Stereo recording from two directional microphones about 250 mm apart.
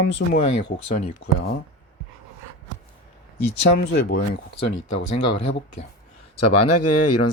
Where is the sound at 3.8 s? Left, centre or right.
Left.